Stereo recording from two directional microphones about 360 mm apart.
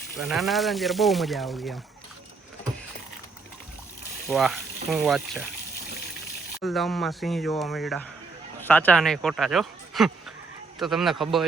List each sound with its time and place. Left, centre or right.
0.2 s speech: centre
4.3 s speech: centre
6.6 s speech: centre